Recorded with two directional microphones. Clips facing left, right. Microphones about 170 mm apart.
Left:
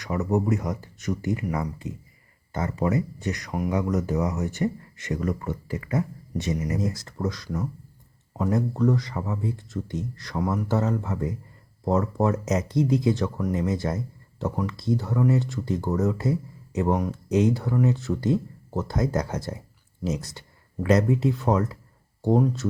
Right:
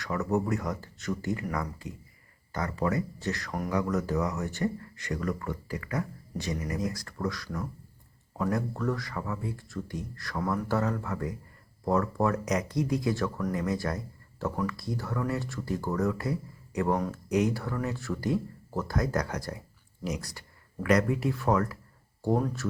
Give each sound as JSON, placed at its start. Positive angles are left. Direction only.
{"t": 0.0, "sound": "speech", "side_deg": 20}